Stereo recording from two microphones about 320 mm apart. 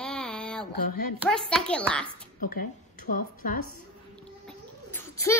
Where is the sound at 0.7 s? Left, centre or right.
Left.